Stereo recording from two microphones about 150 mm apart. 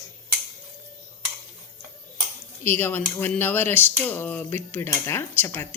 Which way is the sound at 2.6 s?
15° left (ahead or behind).